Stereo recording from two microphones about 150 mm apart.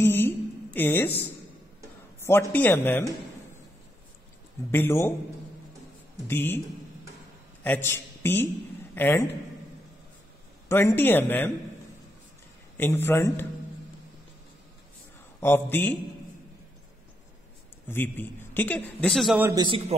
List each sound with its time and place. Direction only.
0.0 s a woman's voice: 15° left (ahead or behind)
2.1 s a sound: 15° left (ahead or behind)
2.5 s a man's voice: 10° left (ahead or behind)
4.6 s a man's voice: 15° left (ahead or behind)
6.2 s a man's voice: 15° left (ahead or behind)
7.6 s a man's voice: 15° left (ahead or behind)
10.7 s a man's voice: 15° left (ahead or behind)
12.7 s a man's voice: 15° left (ahead or behind)
15.4 s a man's voice: 15° left (ahead or behind)
17.8 s a man's voice: 15° left (ahead or behind)
19.5 s a man's voice: 30° right (ahead or behind)